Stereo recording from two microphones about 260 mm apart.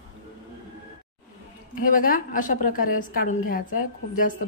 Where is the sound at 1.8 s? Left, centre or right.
Left.